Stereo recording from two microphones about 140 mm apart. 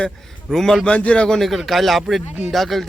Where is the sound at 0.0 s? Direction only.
5° left (ahead or behind).